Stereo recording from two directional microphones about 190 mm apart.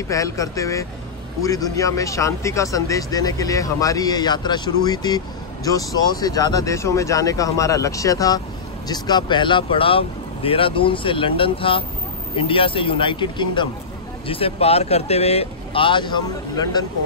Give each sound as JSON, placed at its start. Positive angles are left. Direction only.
{"t": 0.1, "sound": "speech", "side_deg": 15}